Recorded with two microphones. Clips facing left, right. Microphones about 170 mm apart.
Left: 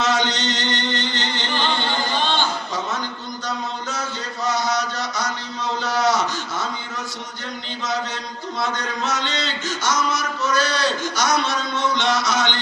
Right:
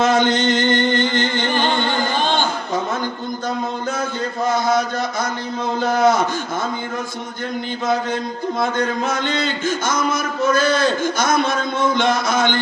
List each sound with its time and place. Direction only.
0.0 s chant: 50° right (ahead or behind)
4.4 s a sound: 50° right (ahead or behind)
8.5 s a man's voice: 50° right (ahead or behind)